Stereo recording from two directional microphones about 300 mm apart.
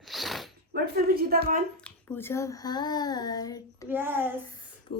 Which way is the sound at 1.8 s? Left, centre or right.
Centre.